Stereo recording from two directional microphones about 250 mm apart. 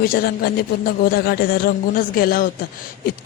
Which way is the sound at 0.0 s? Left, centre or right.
Left.